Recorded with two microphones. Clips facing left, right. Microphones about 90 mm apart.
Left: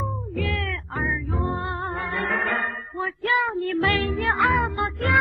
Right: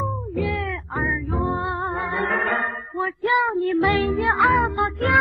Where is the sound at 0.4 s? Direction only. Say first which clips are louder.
Right 3 dB; 15° right (ahead or behind).